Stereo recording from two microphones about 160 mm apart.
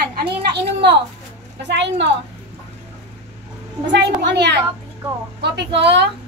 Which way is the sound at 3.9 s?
90° right.